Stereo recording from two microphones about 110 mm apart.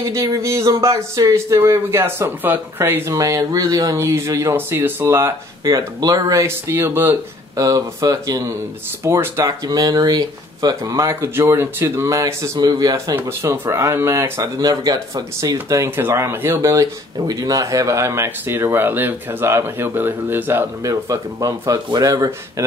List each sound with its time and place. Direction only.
0.0 s speech: 30° right (ahead or behind)
3.1 s speech: 30° right (ahead or behind)
5.6 s speech: 35° right (ahead or behind)
6.4 s speech: 20° right (ahead or behind)
7.5 s speech: 35° right (ahead or behind)
13.1 s speech: 25° right (ahead or behind)
14.6 s speech: 35° right (ahead or behind); by 20.9 s 20° right (ahead or behind)
20.9 s speech: 30° right (ahead or behind)